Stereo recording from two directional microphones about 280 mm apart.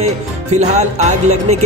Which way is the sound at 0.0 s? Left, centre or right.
Right.